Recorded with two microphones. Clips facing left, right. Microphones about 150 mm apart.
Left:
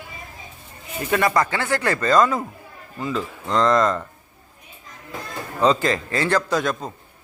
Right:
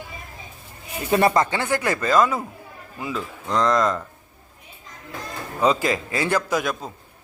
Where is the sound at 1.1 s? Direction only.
30° right (ahead or behind); by 4.0 s centre (ahead or behind).